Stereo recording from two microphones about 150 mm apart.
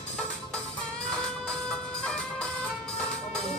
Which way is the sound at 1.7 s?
5° left (ahead or behind).